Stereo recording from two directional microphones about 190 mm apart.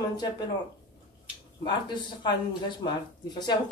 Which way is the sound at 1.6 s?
25° left (ahead or behind).